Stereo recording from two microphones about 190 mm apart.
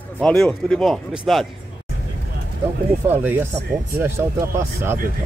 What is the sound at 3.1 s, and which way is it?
Speech, 10° right (ahead or behind).